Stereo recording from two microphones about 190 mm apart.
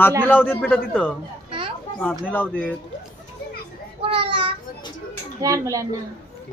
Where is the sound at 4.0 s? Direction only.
30° right (ahead or behind).